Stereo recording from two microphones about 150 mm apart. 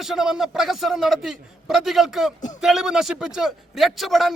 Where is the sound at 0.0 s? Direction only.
Centre (ahead or behind).